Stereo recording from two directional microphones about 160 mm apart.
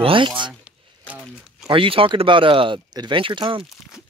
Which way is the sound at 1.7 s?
35° right (ahead or behind).